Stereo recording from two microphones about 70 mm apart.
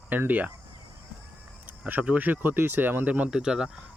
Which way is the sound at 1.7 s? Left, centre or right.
Right.